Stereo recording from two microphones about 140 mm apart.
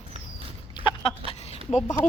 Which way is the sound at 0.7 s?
35° left (ahead or behind).